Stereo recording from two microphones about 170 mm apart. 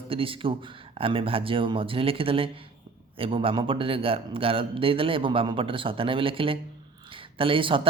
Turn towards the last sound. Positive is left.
turn(degrees=-30)  # may be behind; listen again after turning